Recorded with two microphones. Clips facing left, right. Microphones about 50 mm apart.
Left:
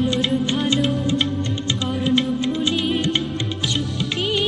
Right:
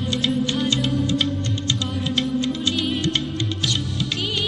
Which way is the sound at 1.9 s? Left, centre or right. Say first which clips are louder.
Left 5 dB; centre.